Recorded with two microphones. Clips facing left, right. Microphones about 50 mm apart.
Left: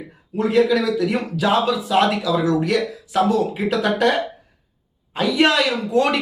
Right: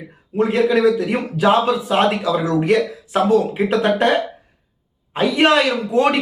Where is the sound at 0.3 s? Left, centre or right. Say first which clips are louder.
Right 1 dB; right.